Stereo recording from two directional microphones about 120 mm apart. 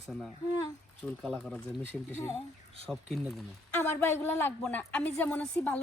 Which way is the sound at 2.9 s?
10° left (ahead or behind).